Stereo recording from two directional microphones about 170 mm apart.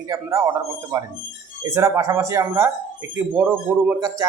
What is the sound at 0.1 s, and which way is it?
Speech, 20° right (ahead or behind).